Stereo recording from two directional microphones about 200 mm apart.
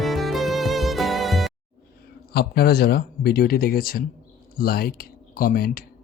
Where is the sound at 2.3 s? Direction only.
50° left (ahead or behind).